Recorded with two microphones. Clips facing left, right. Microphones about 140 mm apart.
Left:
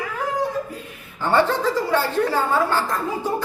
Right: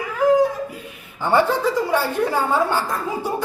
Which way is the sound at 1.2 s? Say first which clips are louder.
Right 1 dB; 10° right (ahead or behind).